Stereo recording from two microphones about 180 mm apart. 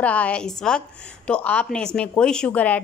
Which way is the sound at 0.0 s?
10° left (ahead or behind).